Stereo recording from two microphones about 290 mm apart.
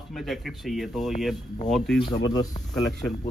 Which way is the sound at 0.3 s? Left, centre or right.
Centre.